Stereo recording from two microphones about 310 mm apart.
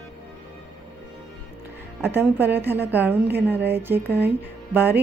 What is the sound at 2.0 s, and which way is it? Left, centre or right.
A woman's voice, centre.